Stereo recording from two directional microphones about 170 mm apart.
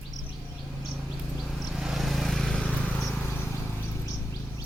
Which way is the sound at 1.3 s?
Centre (ahead or behind).